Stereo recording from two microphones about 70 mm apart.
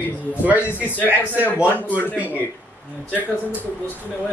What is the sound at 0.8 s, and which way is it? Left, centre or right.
Speech, left.